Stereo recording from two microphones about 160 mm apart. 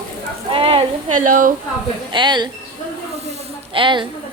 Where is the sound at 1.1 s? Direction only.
55° right (ahead or behind).